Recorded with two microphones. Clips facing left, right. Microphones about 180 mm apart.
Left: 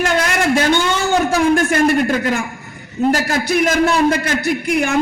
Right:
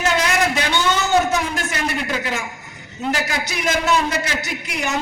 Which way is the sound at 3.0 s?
45° left (ahead or behind).